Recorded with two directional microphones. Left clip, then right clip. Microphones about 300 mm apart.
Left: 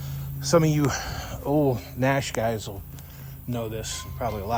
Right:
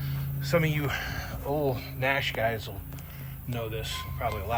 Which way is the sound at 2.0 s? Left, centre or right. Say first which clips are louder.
Left 2 dB; left.